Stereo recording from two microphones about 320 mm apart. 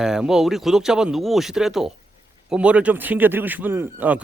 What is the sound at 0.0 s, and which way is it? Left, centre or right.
A man's voice, centre.